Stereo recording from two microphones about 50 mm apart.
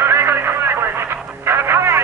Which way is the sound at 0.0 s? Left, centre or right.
Right.